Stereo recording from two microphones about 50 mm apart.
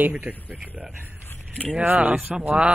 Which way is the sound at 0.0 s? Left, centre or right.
Right.